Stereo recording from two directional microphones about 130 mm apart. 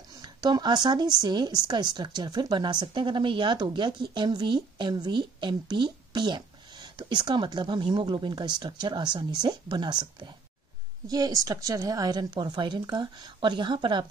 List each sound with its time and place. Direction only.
0.2 s speech: 35° right (ahead or behind)